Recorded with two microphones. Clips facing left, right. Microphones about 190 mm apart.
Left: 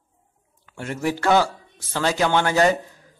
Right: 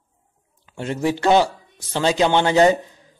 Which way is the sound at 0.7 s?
20° right (ahead or behind).